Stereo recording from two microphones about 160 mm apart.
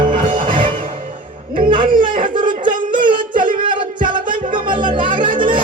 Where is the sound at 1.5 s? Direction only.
30° right (ahead or behind).